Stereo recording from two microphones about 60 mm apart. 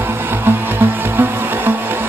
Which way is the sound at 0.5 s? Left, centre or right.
Right.